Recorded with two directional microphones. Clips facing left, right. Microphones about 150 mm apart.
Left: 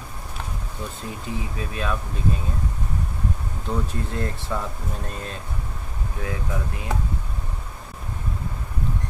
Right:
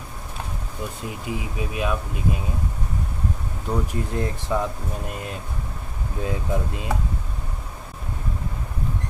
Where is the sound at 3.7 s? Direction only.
15° right (ahead or behind).